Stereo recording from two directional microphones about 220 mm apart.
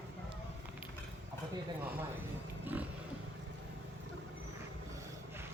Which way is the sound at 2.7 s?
10° right (ahead or behind).